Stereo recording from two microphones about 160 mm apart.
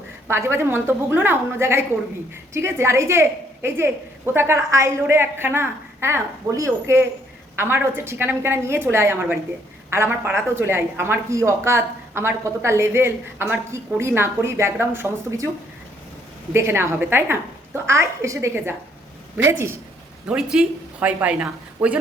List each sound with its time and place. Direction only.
0.3 s speech: 15° right (ahead or behind)
16.5 s speech: 15° right (ahead or behind)
20.2 s speech: 5° right (ahead or behind)